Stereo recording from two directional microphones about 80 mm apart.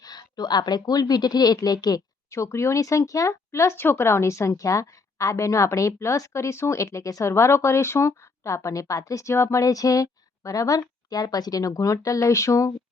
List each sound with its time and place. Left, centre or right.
0.0 s a woman's voice: left
2.3 s speech: left